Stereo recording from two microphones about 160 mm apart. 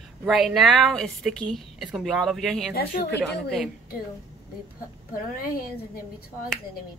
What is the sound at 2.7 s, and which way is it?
Speech, 75° left (ahead or behind).